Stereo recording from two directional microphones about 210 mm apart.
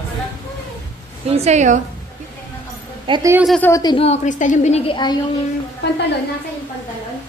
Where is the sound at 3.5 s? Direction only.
10° left (ahead or behind); by 5.1 s 25° left (ahead or behind).